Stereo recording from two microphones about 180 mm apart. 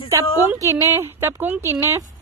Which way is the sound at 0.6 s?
15° right (ahead or behind).